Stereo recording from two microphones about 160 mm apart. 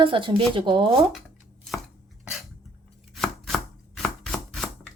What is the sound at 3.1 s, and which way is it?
Chopping, centre (ahead or behind).